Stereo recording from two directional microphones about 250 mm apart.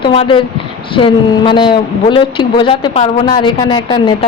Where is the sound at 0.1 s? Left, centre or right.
Left.